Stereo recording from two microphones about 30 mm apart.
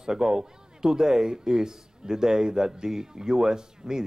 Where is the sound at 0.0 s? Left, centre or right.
Right.